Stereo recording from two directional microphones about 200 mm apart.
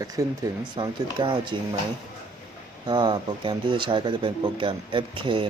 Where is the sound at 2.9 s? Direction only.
20° right (ahead or behind).